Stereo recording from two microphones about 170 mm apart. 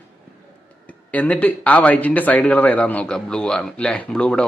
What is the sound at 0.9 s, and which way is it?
Speech, 10° left (ahead or behind).